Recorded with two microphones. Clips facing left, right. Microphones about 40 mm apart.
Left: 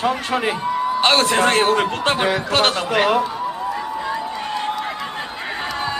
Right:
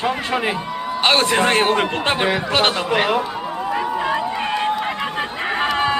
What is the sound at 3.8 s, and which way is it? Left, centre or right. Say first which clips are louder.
Run: right 4 dB; right.